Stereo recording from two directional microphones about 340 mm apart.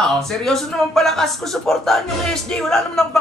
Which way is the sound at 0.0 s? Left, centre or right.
Centre.